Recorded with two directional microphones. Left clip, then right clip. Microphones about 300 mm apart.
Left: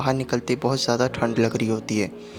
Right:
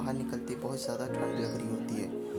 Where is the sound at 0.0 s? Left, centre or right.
Right.